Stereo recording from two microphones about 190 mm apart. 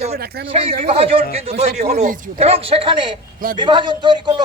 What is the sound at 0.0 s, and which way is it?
Speech, 55° right (ahead or behind).